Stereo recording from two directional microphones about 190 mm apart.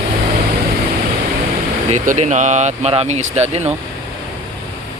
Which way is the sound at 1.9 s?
40° right (ahead or behind).